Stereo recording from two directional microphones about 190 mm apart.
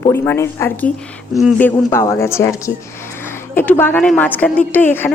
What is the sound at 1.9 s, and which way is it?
Speech, 15° left (ahead or behind).